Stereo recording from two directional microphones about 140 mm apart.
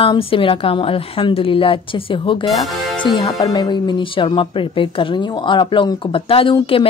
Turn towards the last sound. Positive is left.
turn(degrees=40)  # may be behind; listen again after turning